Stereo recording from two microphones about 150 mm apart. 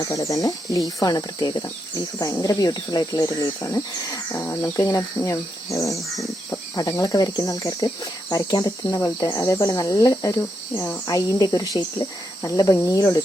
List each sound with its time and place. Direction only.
0.1 s speech: 20° left (ahead or behind)